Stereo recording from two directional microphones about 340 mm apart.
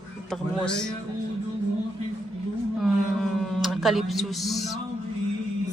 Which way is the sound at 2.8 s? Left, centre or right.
Centre.